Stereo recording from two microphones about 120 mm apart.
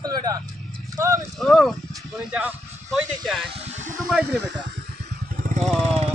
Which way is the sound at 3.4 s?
60° right (ahead or behind).